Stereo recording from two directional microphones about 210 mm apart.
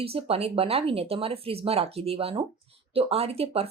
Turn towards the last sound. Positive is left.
turn(degrees=-30)  # may be behind; listen again after turning